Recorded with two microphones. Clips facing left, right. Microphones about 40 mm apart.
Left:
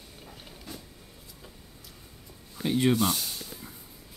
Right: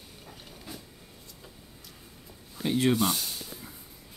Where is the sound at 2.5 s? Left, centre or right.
Centre.